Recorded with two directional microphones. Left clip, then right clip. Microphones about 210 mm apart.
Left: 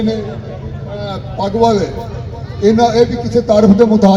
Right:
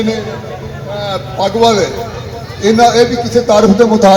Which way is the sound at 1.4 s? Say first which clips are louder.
Right 2 dB; 45° left (ahead or behind).